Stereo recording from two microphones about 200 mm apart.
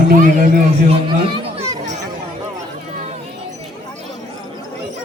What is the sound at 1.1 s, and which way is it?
Chatter, 25° right (ahead or behind).